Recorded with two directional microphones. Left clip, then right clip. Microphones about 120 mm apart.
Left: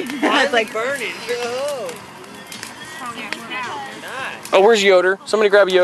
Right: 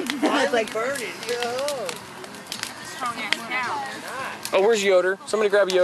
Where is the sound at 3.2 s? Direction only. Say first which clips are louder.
Right 1 dB; 15° right (ahead or behind).